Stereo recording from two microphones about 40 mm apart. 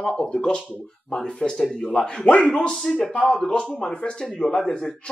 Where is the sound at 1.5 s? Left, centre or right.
Centre.